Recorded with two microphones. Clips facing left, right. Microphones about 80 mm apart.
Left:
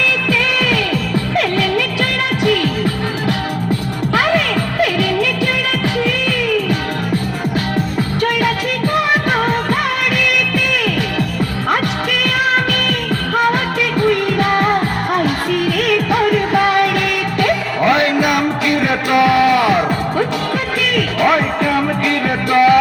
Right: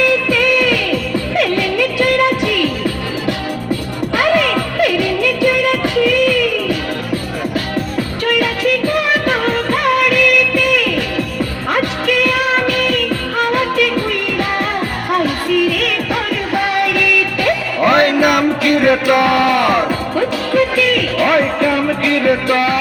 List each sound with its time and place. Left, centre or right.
1.4 s music: left
16.3 s music: left
17.9 s music: right
19.3 s a sound: right
21.2 s music: centre